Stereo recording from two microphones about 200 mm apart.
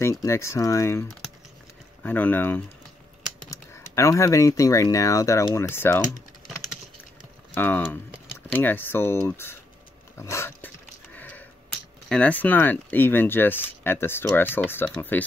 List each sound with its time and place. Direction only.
0.0 s speech: 15° left (ahead or behind)
7.5 s speech: 10° left (ahead or behind)
10.1 s a sound: 15° left (ahead or behind)
12.1 s speech: 5° left (ahead or behind)